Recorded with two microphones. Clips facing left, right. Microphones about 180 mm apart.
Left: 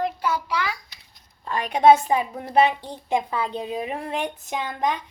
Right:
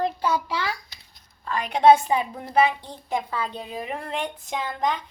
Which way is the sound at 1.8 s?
10° left (ahead or behind).